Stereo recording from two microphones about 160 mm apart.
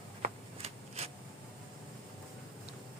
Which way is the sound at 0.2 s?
40° right (ahead or behind).